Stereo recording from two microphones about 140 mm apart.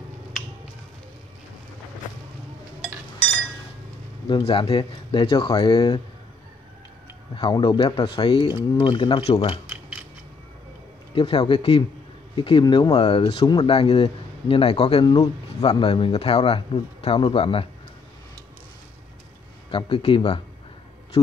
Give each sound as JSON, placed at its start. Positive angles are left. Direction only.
{"t": 4.3, "sound": "speech", "side_deg": 40}
{"t": 7.3, "sound": "speech", "side_deg": 35}
{"t": 11.1, "sound": "speech", "side_deg": 40}
{"t": 19.7, "sound": "speech", "side_deg": 40}